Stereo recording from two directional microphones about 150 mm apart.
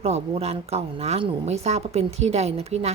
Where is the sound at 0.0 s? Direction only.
45° right (ahead or behind).